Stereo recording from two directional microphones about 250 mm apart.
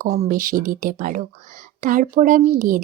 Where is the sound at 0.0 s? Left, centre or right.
Right.